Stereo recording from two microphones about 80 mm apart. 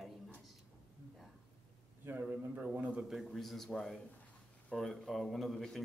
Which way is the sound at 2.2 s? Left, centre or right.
Centre.